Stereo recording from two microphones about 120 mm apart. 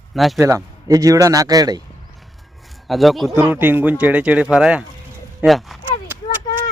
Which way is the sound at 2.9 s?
Centre (ahead or behind).